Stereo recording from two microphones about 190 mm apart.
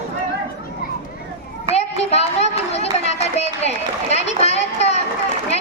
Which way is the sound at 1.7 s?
35° left (ahead or behind).